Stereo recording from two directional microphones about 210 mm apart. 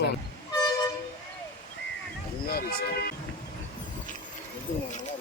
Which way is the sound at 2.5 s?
45° left (ahead or behind).